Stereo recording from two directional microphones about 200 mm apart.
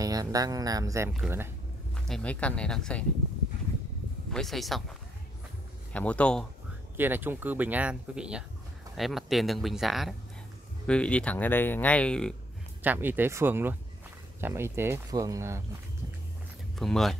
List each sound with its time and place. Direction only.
0.0 s speech: 20° right (ahead or behind)
2.0 s speech: 5° left (ahead or behind)
4.3 s speech: centre (ahead or behind)
5.9 s speech: 5° left (ahead or behind)
7.0 s speech: 10° right (ahead or behind)
12.8 s speech: 10° right (ahead or behind)
16.7 s speech: centre (ahead or behind)